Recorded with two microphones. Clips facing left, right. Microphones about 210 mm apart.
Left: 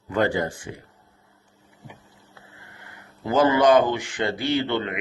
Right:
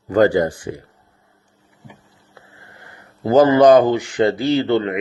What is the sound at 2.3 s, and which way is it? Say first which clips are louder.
Speech: right 4 dB; 40° right (ahead or behind).